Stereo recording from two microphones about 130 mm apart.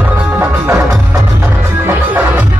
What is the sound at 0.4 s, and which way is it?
Music, 25° right (ahead or behind).